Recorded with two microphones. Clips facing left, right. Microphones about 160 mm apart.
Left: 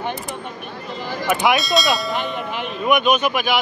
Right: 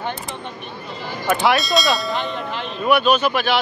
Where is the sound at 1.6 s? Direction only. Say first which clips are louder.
Even; centre (ahead or behind).